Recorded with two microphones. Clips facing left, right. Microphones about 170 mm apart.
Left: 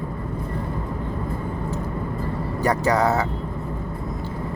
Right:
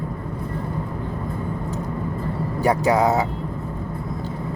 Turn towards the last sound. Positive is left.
turn(degrees=-15)  # may be behind; listen again after turning